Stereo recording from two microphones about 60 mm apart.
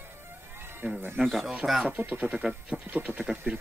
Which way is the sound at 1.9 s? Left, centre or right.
Right.